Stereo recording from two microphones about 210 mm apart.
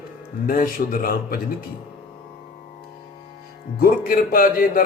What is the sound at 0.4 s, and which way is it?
Speech, 40° left (ahead or behind).